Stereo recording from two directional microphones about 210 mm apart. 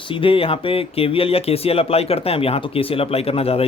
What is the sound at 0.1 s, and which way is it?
Speech, 25° left (ahead or behind).